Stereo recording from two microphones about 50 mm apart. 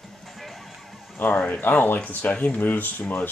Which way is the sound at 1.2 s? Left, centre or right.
Left.